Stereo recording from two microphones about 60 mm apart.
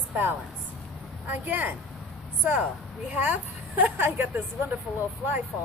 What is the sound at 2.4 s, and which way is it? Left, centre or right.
Speech, centre.